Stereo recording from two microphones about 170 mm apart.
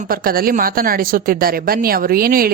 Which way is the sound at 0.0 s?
60° right (ahead or behind).